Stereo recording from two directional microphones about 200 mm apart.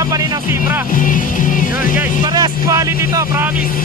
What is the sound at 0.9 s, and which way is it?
Speech, 40° left (ahead or behind).